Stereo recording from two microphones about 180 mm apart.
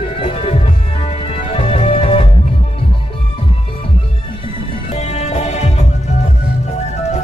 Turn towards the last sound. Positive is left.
turn(degrees=40)  # may be behind; listen again after turning